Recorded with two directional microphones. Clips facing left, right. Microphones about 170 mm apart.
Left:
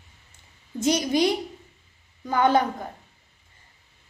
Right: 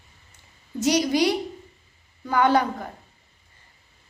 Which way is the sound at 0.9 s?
20° left (ahead or behind).